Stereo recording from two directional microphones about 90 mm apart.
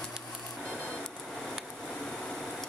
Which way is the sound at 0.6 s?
10° left (ahead or behind).